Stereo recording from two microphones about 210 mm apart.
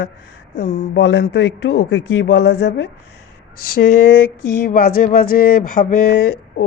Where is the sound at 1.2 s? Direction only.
50° left (ahead or behind).